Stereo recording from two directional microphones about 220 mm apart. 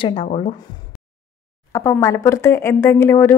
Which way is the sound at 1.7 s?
15° left (ahead or behind).